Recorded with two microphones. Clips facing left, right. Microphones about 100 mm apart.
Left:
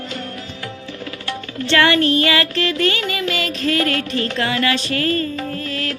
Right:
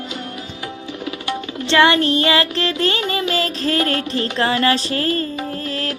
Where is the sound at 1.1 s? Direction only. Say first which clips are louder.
Right 5 dB; 20° right (ahead or behind).